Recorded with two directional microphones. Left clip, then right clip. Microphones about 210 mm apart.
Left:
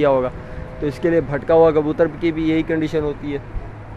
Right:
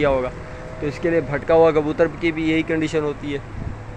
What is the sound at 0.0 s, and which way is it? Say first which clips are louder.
A man's voice: left 3 dB; 20° left (ahead or behind).